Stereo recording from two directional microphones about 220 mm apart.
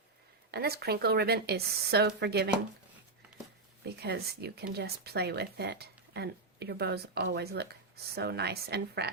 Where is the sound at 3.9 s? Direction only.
45° right (ahead or behind).